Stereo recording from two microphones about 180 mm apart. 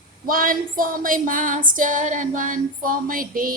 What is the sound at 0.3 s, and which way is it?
Female singing, 50° right (ahead or behind).